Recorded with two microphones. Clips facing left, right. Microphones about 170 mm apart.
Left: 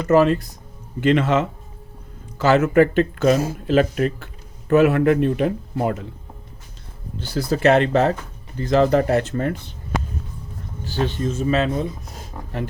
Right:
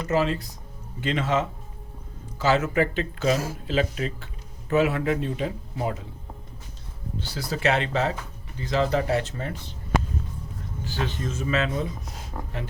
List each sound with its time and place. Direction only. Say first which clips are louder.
0.1 s speech: left 9 dB; 55° left (ahead or behind)
7.2 s speech: left 9 dB; 45° left (ahead or behind)
10.8 s speech: left 7 dB; 30° left (ahead or behind)